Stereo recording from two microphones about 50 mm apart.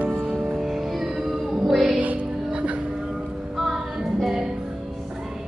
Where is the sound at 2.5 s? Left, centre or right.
Right.